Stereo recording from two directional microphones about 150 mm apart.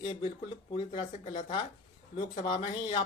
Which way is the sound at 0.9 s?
45° left (ahead or behind).